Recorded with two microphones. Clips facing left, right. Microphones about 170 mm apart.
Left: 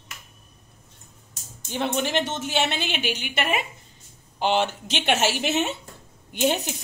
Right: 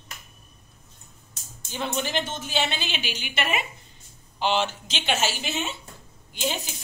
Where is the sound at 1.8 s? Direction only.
70° left (ahead or behind).